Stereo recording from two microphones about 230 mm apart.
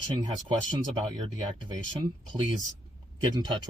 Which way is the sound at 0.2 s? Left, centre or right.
Right.